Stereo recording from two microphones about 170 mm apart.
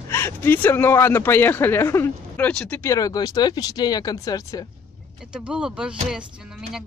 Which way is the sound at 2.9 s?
20° left (ahead or behind).